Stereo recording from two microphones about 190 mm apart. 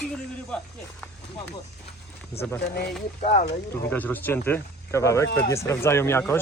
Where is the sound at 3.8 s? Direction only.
10° left (ahead or behind).